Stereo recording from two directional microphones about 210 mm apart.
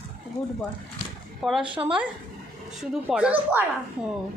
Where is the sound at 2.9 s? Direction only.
5° right (ahead or behind).